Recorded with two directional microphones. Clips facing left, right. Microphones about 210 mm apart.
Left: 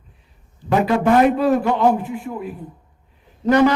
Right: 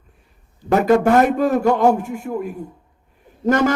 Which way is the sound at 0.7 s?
45° right (ahead or behind).